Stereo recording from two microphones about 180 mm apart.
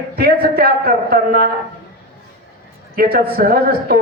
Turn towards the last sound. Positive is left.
turn(degrees=-55)  # may be behind; listen again after turning